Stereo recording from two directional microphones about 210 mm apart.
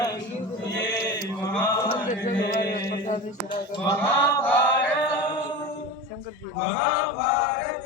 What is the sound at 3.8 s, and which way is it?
Chant, 10° left (ahead or behind).